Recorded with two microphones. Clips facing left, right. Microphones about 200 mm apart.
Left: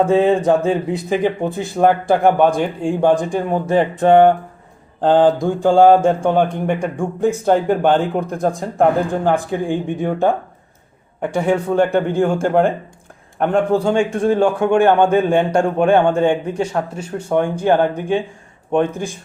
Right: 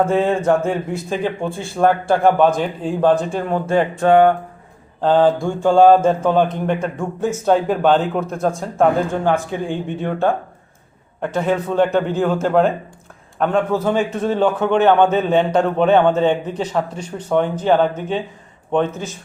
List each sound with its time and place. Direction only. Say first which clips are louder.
0.0 s a man's voice: left 3 dB; 15° left (ahead or behind)
11.2 s a man's voice: left 2 dB; 15° left (ahead or behind)